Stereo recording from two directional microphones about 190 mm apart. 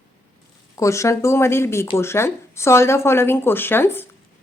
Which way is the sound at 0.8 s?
15° left (ahead or behind).